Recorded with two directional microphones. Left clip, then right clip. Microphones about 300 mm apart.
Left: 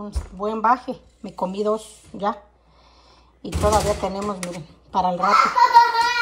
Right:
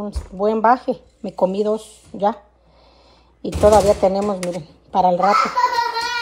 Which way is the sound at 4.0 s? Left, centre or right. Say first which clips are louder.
Right 8 dB; left.